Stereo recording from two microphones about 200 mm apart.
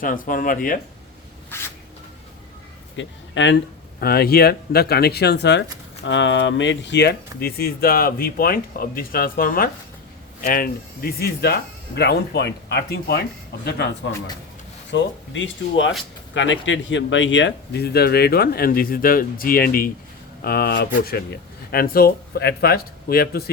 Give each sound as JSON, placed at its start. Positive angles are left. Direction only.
{"t": 0.0, "sound": "speech", "side_deg": 45}
{"t": 1.5, "sound": "a sound", "side_deg": 10}
{"t": 2.9, "sound": "a man's voice", "side_deg": 65}
{"t": 4.0, "sound": "speech", "side_deg": 50}
{"t": 14.9, "sound": "speech", "side_deg": 65}